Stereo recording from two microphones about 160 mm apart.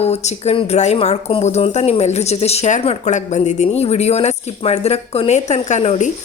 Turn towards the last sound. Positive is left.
turn(degrees=45)  # may be behind; listen again after turning